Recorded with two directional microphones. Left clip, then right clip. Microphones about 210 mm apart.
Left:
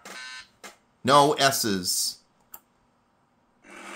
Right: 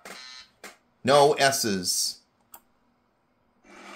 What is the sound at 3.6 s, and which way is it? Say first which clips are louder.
Filing: left 4 dB; 30° left (ahead or behind).